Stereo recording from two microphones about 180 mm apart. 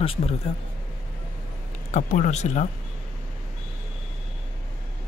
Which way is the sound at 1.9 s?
45° left (ahead or behind).